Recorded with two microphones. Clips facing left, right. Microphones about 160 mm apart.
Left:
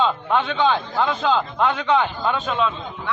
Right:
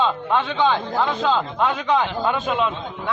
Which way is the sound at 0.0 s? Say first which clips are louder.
Even; 5° right (ahead or behind).